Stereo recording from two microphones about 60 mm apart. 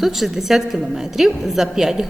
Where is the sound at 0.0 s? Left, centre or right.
Centre.